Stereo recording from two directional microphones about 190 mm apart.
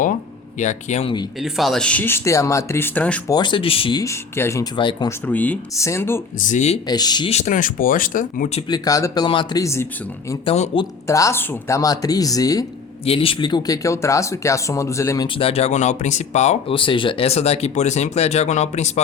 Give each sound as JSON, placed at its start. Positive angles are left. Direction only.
{"t": 0.6, "sound": "speech", "side_deg": 40}
{"t": 1.4, "sound": "speech", "side_deg": 0}
{"t": 3.2, "sound": "speech", "side_deg": 20}
{"t": 4.0, "sound": "speech", "side_deg": 15}
{"t": 5.2, "sound": "speech", "side_deg": 10}
{"t": 6.4, "sound": "speech", "side_deg": 40}
{"t": 6.8, "sound": "speech", "side_deg": 20}
{"t": 8.7, "sound": "speech", "side_deg": 20}
{"t": 10.4, "sound": "speech", "side_deg": 30}
{"t": 11.0, "sound": "speech", "side_deg": 15}
{"t": 15.4, "sound": "speech", "side_deg": 30}